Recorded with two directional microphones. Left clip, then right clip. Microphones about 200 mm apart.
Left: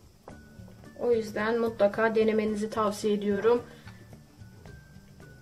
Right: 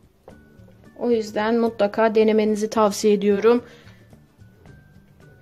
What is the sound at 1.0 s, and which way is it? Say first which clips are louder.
Speech: right 5 dB; 40° right (ahead or behind).